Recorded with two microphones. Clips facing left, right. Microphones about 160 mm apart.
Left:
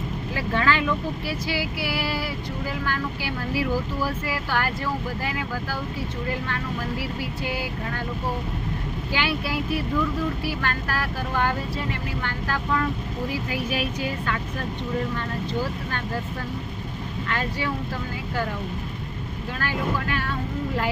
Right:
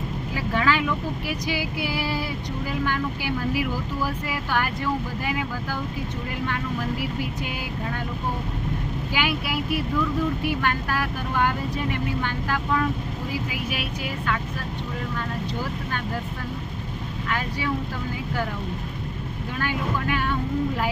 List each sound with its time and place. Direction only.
0.3 s vehicle: 10° right (ahead or behind)
1.3 s female singing: 15° right (ahead or behind)
4.3 s female singing: 15° right (ahead or behind)
9.1 s female singing: 15° right (ahead or behind)
10.6 s female singing: 15° right (ahead or behind)
19.6 s female singing: 15° right (ahead or behind)